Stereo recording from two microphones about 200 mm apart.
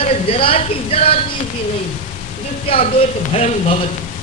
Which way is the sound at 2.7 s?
30° left (ahead or behind).